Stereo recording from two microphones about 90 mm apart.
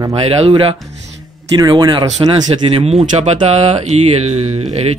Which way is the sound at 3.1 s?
65° right (ahead or behind).